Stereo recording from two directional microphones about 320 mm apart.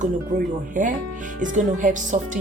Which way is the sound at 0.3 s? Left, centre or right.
Right.